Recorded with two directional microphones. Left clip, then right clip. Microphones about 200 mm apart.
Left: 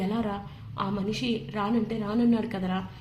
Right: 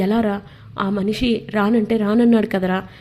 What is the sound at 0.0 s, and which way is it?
A woman's voice, 35° right (ahead or behind).